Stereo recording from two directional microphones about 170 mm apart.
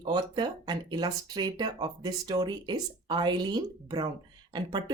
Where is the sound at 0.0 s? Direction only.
25° right (ahead or behind).